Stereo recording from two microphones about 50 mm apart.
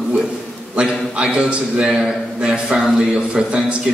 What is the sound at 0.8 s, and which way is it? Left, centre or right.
A man's voice, right.